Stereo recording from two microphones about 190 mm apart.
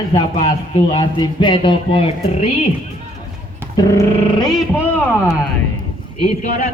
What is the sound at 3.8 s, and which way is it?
Speech, 20° left (ahead or behind).